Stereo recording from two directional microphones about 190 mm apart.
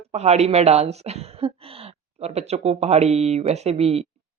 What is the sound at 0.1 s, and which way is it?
Speech, 35° right (ahead or behind).